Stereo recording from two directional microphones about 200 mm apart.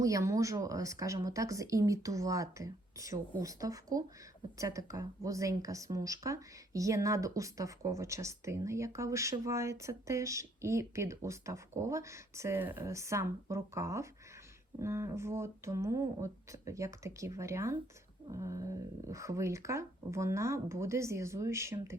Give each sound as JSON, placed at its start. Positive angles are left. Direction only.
{"t": 0.0, "sound": "speech", "side_deg": -15}